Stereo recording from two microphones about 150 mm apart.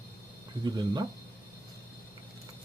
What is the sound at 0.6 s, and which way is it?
Speech, 25° right (ahead or behind).